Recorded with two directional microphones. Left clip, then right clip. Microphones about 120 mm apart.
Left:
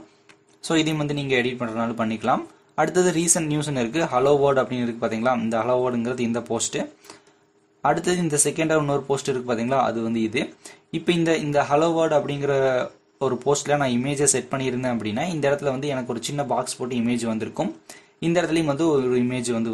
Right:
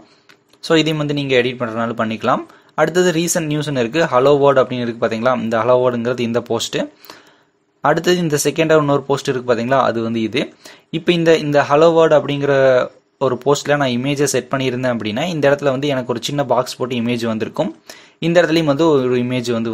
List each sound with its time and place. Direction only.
0.6 s speech: 25° right (ahead or behind)